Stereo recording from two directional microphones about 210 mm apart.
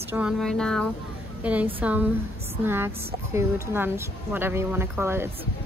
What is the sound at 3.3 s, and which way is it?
Speech, 10° right (ahead or behind).